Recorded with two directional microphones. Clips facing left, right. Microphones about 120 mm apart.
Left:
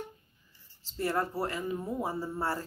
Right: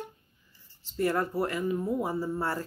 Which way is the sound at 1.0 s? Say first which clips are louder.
Right 3 dB; 30° left (ahead or behind).